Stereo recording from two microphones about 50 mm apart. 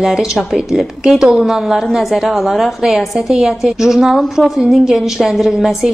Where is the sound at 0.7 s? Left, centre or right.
Centre.